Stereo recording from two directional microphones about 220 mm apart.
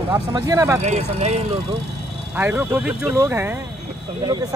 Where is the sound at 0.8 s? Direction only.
30° right (ahead or behind).